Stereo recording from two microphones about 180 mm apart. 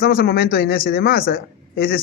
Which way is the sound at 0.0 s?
60° left (ahead or behind).